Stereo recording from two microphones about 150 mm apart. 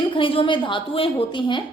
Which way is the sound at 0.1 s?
35° left (ahead or behind).